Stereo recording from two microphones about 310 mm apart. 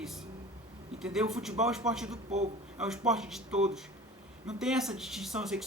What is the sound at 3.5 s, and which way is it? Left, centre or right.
Speech, right.